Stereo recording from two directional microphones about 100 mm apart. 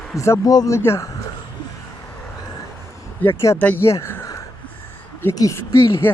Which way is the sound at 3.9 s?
25° left (ahead or behind).